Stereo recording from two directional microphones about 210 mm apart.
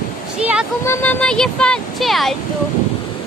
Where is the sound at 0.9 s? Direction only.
10° left (ahead or behind).